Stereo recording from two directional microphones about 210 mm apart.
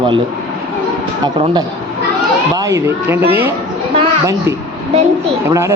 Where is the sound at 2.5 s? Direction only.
15° right (ahead or behind).